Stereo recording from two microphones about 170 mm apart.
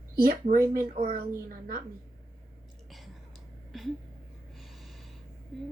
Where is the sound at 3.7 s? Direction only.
Centre (ahead or behind).